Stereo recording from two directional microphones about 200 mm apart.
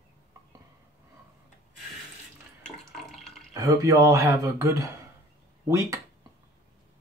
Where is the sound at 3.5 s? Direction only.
15° right (ahead or behind).